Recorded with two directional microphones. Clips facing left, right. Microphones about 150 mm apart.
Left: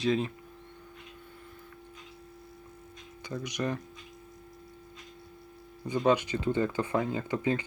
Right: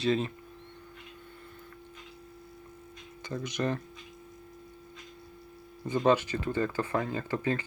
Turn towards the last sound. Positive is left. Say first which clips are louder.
# left 1 dB
turn(degrees=15)  # may be behind; listen again after turning